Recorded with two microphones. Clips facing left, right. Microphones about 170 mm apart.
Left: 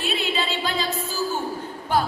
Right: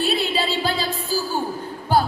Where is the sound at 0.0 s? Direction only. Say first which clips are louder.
Right 4 dB; 35° right (ahead or behind).